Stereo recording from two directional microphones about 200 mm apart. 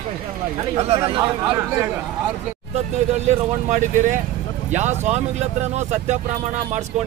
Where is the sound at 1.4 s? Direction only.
10° right (ahead or behind).